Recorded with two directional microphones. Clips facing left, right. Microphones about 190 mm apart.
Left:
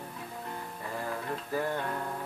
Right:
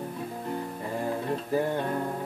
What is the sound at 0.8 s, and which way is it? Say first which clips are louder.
Music: right 5 dB; 25° right (ahead or behind).